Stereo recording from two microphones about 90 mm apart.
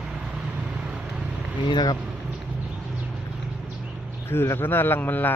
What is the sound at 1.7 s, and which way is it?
Speech, 50° left (ahead or behind).